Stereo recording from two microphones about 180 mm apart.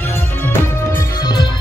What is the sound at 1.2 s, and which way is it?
Music, 25° left (ahead or behind).